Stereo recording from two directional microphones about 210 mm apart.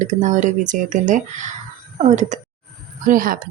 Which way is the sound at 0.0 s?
35° right (ahead or behind).